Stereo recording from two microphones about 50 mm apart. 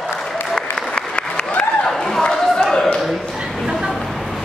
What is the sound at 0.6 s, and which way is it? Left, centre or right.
Applause, centre.